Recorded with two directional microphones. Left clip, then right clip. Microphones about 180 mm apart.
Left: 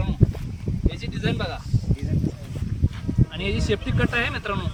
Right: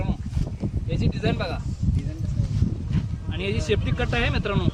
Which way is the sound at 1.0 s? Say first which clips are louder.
Right 4 dB; 20° right (ahead or behind).